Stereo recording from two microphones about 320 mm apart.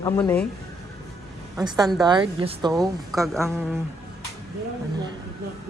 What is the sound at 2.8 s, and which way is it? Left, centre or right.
Speech, centre.